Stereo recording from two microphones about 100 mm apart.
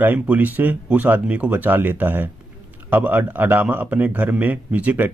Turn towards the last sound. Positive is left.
turn(degrees=-15)  # may be behind; listen again after turning